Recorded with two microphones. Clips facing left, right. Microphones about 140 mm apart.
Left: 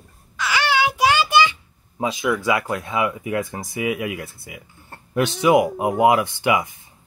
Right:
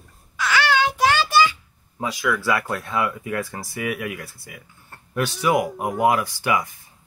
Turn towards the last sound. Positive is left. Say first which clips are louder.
# left 3 dB
turn(degrees=20)  # may be behind; listen again after turning